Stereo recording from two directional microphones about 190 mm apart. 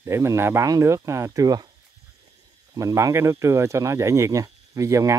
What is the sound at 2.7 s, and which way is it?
Speech, 15° right (ahead or behind).